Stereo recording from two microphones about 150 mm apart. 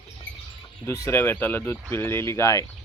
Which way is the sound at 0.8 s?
20° left (ahead or behind).